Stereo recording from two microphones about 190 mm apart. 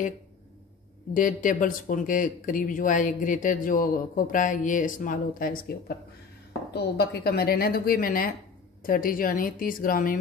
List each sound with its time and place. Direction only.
1.1 s speech: 45° left (ahead or behind)
6.7 s speech: 60° left (ahead or behind)